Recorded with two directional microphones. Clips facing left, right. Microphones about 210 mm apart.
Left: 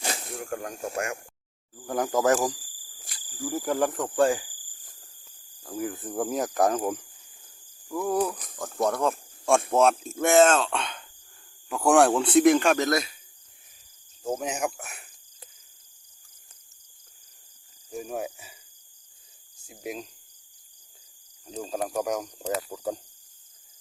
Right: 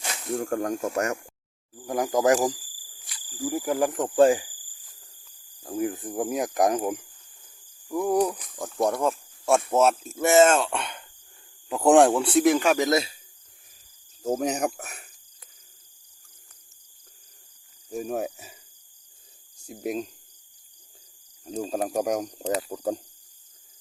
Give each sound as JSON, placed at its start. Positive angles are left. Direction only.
{"t": 0.3, "sound": "speech", "side_deg": -40}
{"t": 1.9, "sound": "speech", "side_deg": -15}
{"t": 5.6, "sound": "speech", "side_deg": -20}
{"t": 12.1, "sound": "speech", "side_deg": 0}
{"t": 12.9, "sound": "speech", "side_deg": -25}
{"t": 14.4, "sound": "speech", "side_deg": -40}
{"t": 18.1, "sound": "speech", "side_deg": -40}
{"t": 19.6, "sound": "speech", "side_deg": -40}
{"t": 21.4, "sound": "speech", "side_deg": -40}
{"t": 21.8, "sound": "speech", "side_deg": -30}
{"t": 22.0, "sound": "speech", "side_deg": -45}